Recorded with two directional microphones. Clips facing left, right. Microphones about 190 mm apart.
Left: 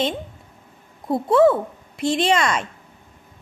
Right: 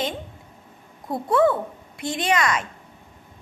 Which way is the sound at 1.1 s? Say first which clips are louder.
Left 4 dB; 25° left (ahead or behind).